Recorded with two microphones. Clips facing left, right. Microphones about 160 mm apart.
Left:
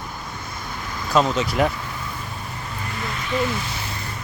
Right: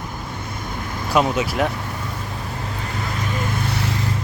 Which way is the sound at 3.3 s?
50° right (ahead or behind).